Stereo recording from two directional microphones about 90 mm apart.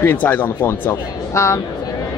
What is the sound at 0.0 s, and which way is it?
Speech, 20° left (ahead or behind).